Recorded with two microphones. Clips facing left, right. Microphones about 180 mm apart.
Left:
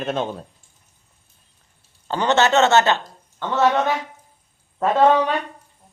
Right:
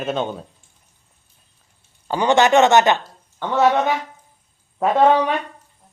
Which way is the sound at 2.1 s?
10° right (ahead or behind).